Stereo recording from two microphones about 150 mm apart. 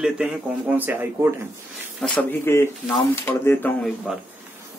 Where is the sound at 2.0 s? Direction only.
10° left (ahead or behind).